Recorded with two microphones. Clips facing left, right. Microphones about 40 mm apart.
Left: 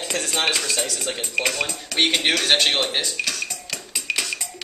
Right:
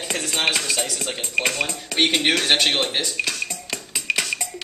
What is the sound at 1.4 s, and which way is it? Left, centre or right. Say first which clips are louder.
Speech: even; centre.